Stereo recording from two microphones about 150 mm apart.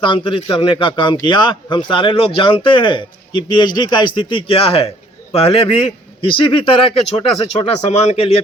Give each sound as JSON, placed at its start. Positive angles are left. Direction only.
{"t": 0.0, "sound": "a man's voice", "side_deg": 35}